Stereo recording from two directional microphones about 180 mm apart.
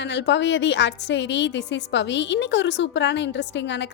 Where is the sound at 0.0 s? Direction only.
75° left (ahead or behind).